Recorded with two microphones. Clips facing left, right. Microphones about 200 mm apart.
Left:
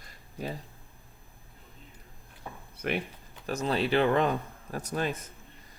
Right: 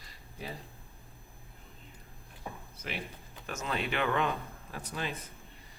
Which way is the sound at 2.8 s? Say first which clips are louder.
Left 10 dB; 55° left (ahead or behind).